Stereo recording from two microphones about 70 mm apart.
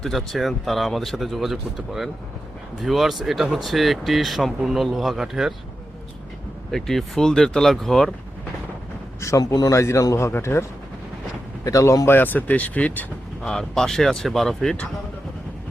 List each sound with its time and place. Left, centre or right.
0.0 s speech: centre
6.7 s speech: centre
9.4 s speech: left
9.7 s speech: left
11.6 s speech: left
12.1 s speech: left
13.4 s speech: centre